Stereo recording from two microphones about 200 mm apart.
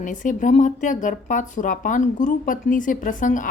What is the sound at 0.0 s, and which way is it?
Speech, 40° left (ahead or behind).